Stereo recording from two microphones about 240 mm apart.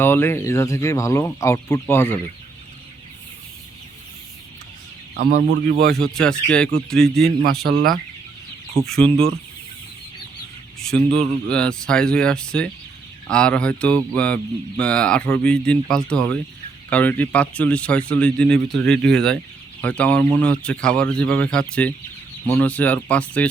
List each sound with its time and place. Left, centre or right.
0.0 s speech: centre
5.1 s speech: right
6.0 s speech: centre
7.2 s speech: right
8.7 s speech: centre
10.8 s speech: centre